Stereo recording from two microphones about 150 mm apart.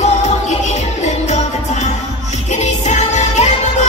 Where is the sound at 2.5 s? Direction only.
50° left (ahead or behind).